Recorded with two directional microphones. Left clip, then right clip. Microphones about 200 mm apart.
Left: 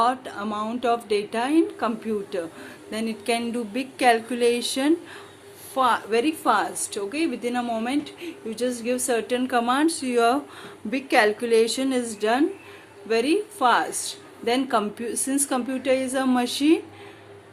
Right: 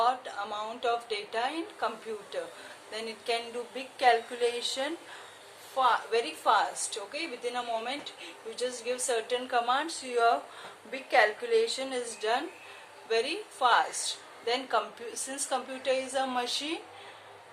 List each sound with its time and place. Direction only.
0.0 s a woman's voice: 50° left (ahead or behind)